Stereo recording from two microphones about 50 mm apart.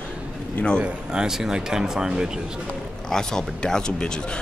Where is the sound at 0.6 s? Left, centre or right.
Left.